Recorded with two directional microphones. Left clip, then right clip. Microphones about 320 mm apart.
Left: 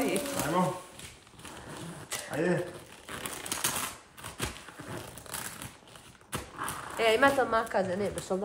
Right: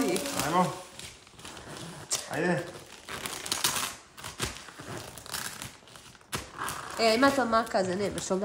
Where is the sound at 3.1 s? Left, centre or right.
Centre.